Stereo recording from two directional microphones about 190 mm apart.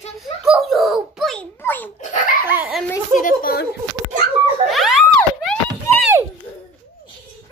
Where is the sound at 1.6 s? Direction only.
10° left (ahead or behind).